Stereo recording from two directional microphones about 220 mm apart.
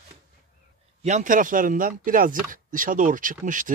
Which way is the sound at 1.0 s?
35° right (ahead or behind).